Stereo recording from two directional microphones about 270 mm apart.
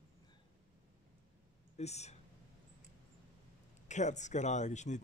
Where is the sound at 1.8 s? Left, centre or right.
Left.